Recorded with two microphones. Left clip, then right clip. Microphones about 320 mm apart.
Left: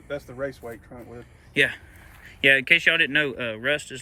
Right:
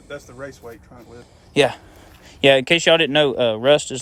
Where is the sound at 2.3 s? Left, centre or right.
Centre.